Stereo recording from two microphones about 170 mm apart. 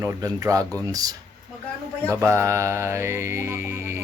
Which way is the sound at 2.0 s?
15° right (ahead or behind).